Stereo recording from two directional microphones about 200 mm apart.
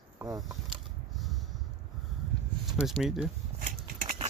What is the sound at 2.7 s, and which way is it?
Speech, centre (ahead or behind).